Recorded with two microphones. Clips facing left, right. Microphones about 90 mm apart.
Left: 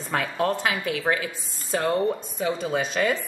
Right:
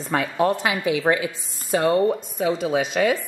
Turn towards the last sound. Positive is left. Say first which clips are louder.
# right 4 dB
turn(degrees=-5)  # may be behind; listen again after turning